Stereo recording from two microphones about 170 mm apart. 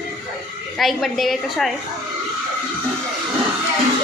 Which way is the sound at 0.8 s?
Centre (ahead or behind).